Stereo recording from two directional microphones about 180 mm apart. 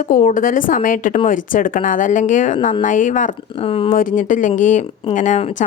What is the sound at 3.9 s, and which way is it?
A woman's voice, 50° left (ahead or behind).